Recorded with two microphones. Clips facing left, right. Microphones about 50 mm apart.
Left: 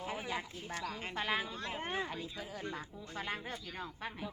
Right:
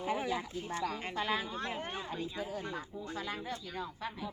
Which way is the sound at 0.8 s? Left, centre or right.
Centre.